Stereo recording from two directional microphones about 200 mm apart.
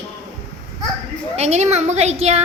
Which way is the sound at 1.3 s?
35° right (ahead or behind).